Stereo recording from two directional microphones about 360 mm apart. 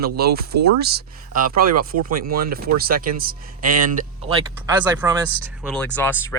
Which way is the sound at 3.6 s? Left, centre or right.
Right.